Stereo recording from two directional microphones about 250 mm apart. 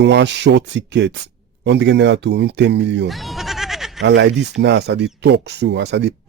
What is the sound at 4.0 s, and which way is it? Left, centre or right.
Speech, right.